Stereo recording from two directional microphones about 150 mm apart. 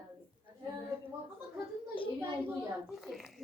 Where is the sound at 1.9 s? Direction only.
35° left (ahead or behind).